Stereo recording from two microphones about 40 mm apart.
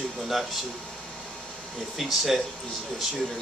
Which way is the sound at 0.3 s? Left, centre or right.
Centre.